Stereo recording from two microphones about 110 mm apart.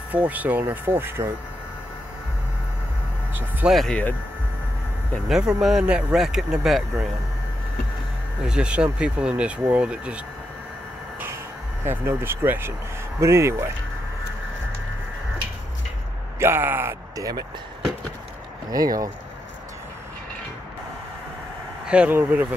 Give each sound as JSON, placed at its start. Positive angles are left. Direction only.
{"t": 0.1, "sound": "speech", "side_deg": -15}
{"t": 3.7, "sound": "speech", "side_deg": 5}
{"t": 5.3, "sound": "speech", "side_deg": -5}
{"t": 8.5, "sound": "speech", "side_deg": -10}
{"t": 11.8, "sound": "speech", "side_deg": -20}
{"t": 16.3, "sound": "speech", "side_deg": -20}
{"t": 17.2, "sound": "speech", "side_deg": -35}
{"t": 18.7, "sound": "speech", "side_deg": -35}
{"t": 21.8, "sound": "speech", "side_deg": -10}